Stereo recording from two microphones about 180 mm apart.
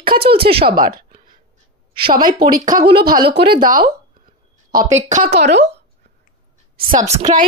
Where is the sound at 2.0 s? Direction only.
30° right (ahead or behind).